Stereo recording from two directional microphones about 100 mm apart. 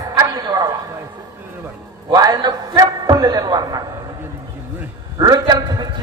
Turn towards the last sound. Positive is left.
turn(degrees=-45)  # may be behind; listen again after turning